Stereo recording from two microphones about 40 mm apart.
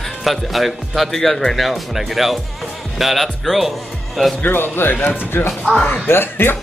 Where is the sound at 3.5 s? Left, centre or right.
Centre.